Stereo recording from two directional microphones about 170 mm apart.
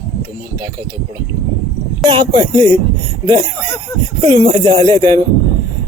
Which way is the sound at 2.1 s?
30° right (ahead or behind).